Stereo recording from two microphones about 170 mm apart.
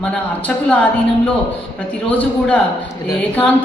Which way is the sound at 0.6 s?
10° left (ahead or behind).